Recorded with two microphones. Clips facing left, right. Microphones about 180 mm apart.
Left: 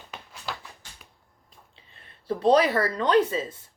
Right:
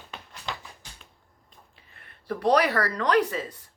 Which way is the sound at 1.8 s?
25° left (ahead or behind).